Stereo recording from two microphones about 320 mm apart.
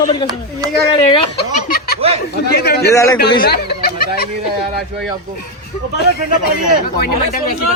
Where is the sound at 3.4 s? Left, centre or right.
Left.